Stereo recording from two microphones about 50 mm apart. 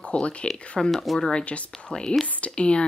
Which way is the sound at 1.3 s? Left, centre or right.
Left.